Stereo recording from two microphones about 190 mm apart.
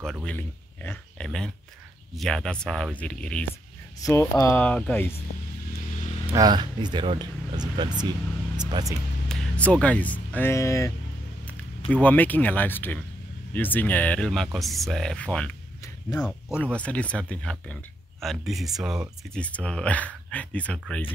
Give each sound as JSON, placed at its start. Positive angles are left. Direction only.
{"t": 0.0, "sound": "speech", "side_deg": 5}
{"t": 6.3, "sound": "speech", "side_deg": -20}
{"t": 8.5, "sound": "music", "side_deg": -20}
{"t": 9.3, "sound": "speech", "side_deg": 5}
{"t": 11.9, "sound": "speech", "side_deg": 10}